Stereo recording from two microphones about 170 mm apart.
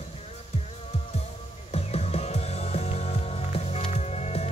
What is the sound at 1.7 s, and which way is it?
Music, 40° left (ahead or behind).